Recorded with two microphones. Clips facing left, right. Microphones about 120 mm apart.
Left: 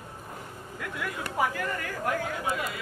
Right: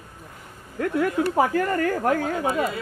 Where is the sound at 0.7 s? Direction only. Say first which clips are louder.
Right 13 dB; 45° right (ahead or behind).